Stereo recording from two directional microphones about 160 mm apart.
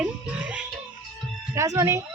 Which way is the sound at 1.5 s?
20° right (ahead or behind).